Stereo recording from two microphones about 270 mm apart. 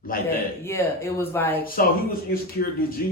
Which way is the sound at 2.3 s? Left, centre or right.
Left.